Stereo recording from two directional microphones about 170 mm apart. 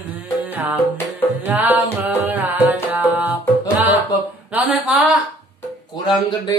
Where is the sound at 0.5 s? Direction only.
10° right (ahead or behind).